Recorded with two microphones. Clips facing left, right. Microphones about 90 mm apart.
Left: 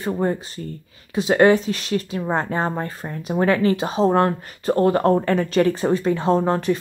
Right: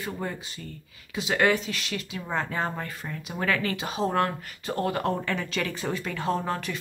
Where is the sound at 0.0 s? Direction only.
35° left (ahead or behind).